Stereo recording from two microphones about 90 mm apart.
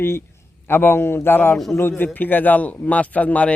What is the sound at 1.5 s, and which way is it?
Speech, 5° left (ahead or behind).